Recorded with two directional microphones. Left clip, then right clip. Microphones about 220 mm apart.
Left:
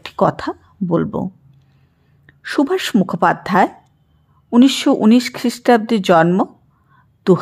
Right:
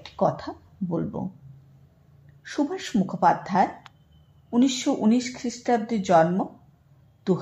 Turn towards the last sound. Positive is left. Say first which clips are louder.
# left 12 dB
turn(degrees=35)  # may be behind; listen again after turning